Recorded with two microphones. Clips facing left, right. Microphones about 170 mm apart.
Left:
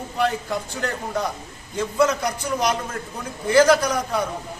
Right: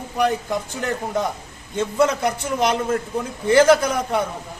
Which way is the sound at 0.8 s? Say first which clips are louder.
Right 3 dB; 20° right (ahead or behind).